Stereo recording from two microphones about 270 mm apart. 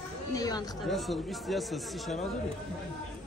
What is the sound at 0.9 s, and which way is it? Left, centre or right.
Speech, centre.